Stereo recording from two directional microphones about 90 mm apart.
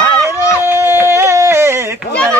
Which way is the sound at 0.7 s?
25° right (ahead or behind).